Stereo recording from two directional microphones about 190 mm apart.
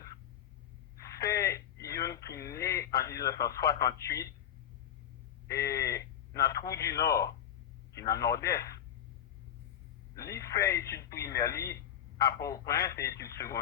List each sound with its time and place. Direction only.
1.3 s radio: 15° left (ahead or behind)
3.0 s speech: 15° left (ahead or behind)
5.5 s a man's voice: 15° left (ahead or behind)
10.2 s a man's voice: 15° left (ahead or behind)